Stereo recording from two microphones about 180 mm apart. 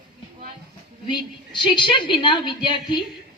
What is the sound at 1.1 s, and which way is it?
A woman's voice, 25° left (ahead or behind).